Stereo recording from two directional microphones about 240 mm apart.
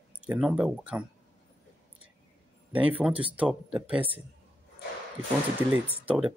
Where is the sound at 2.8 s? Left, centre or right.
Centre.